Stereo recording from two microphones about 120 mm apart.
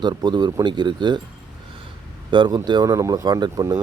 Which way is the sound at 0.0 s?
35° right (ahead or behind).